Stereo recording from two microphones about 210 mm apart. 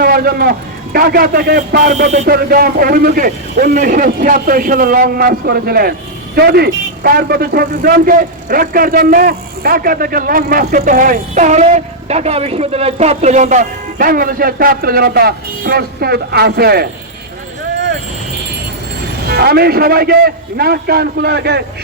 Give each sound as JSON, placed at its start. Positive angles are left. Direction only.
{"t": 0.0, "sound": "a man's voice", "side_deg": -45}
{"t": 19.3, "sound": "a man's voice", "side_deg": -50}